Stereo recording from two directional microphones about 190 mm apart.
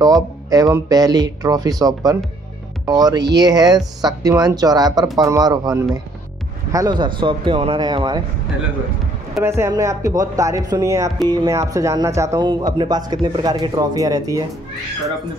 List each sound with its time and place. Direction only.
0.5 s speech: 20° right (ahead or behind)
9.4 s speech: 15° right (ahead or behind)